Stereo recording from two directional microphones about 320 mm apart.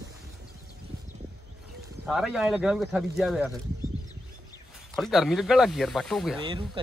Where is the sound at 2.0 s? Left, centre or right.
Centre.